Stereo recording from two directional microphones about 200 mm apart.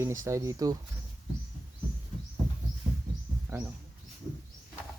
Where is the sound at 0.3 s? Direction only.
15° right (ahead or behind).